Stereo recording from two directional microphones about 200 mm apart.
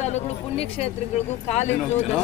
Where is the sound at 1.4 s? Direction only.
35° left (ahead or behind).